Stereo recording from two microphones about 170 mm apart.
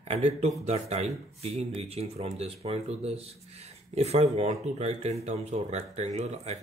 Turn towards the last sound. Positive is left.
turn(degrees=-40)  # may be behind; listen again after turning